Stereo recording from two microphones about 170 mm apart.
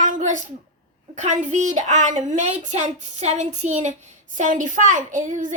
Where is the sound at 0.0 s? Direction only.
50° right (ahead or behind).